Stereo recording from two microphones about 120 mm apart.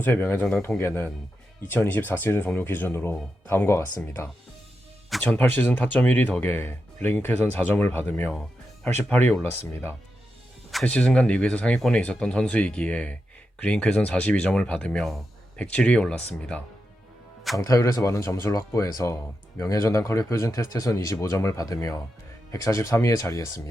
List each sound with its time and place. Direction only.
0.0 s speech: 15° left (ahead or behind)
5.2 s speech: 15° left (ahead or behind)
8.3 s speech: 5° left (ahead or behind)
10.7 s speech: 5° left (ahead or behind)
17.6 s speech: 25° left (ahead or behind)